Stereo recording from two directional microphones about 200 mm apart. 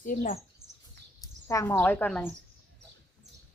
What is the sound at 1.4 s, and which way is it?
Speech, 15° left (ahead or behind).